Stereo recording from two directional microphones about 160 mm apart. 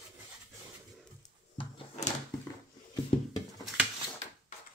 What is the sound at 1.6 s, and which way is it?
Drawer open or close, 35° left (ahead or behind).